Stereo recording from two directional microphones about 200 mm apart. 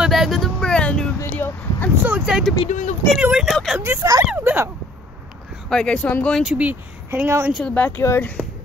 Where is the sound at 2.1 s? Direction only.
5° right (ahead or behind).